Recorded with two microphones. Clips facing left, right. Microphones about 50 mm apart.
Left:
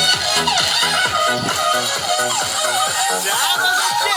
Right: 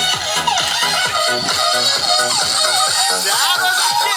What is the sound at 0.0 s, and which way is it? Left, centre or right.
Music, right.